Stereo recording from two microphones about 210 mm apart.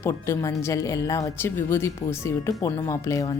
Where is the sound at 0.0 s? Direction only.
10° left (ahead or behind).